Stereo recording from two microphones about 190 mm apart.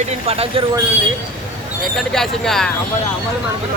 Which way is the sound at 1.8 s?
Centre (ahead or behind).